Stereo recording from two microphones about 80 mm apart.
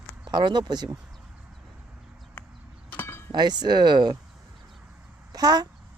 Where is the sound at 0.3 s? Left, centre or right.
Right.